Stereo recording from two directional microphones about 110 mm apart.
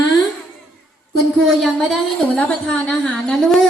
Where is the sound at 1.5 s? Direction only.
Centre (ahead or behind).